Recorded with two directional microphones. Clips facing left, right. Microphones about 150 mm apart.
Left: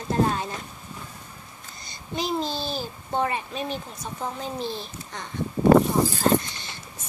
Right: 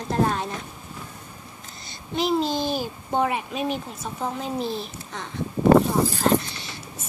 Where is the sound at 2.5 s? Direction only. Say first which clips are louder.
Right 5 dB; 15° right (ahead or behind).